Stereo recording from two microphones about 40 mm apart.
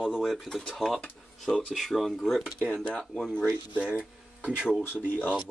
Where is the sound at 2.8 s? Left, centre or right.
Left.